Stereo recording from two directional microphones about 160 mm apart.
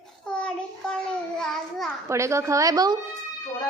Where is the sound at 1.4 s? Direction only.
Centre (ahead or behind).